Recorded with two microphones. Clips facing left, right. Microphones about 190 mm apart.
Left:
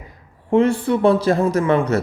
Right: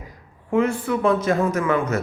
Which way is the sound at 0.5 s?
30° left (ahead or behind).